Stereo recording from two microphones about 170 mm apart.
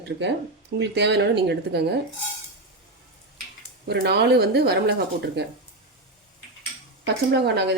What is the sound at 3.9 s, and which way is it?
Speech, 75° right (ahead or behind).